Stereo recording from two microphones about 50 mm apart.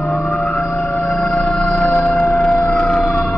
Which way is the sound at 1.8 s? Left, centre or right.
Left.